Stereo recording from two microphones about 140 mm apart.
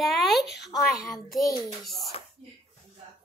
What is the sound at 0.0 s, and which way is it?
A woman's voice, centre (ahead or behind).